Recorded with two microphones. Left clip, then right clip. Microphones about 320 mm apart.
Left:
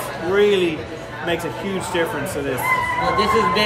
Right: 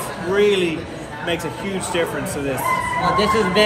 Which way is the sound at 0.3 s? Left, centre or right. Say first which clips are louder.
Even; centre.